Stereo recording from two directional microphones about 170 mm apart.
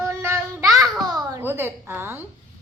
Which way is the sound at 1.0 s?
20° right (ahead or behind).